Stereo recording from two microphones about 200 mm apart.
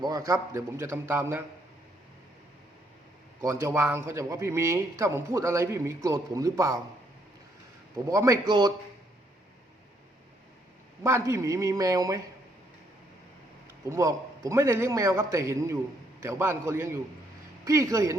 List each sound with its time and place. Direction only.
0.0 s speech: 15° right (ahead or behind)
3.4 s speech: 15° right (ahead or behind)
8.0 s speech: 15° right (ahead or behind)
11.0 s speech: 15° right (ahead or behind)
13.9 s speech: 15° right (ahead or behind)